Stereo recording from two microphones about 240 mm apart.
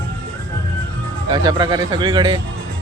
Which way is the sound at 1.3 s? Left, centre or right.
Centre.